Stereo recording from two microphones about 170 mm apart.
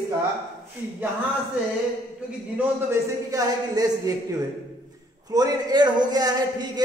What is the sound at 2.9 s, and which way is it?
Speech, 20° right (ahead or behind).